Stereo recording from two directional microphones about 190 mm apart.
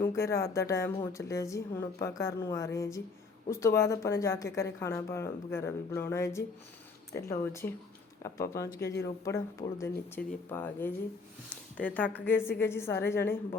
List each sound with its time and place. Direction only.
0.0 s a woman's voice: 15° left (ahead or behind)